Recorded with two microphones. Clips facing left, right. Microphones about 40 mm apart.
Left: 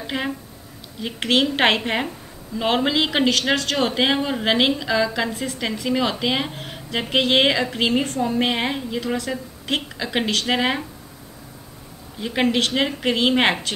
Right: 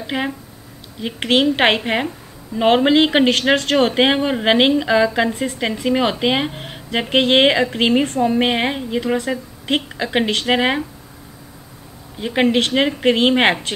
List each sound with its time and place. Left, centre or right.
0.0 s speech: centre
12.2 s speech: centre